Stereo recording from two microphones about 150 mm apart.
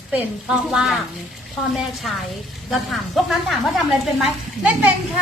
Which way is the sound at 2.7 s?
Centre (ahead or behind).